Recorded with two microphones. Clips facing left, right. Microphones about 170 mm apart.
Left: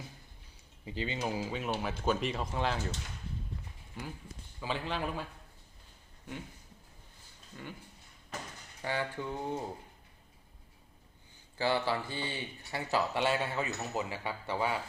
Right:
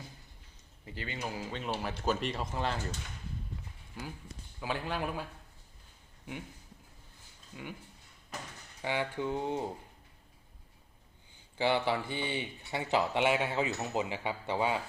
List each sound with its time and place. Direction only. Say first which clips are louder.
0.9 s speech: left 4 dB; 20° left (ahead or behind); by 2.8 s centre (ahead or behind)
4.6 s speech: even; 10° right (ahead or behind)
7.5 s speech: right 2 dB; 10° right (ahead or behind)
8.8 s speech: right 2 dB; 15° right (ahead or behind)
11.5 s speech: right 1 dB; 20° right (ahead or behind)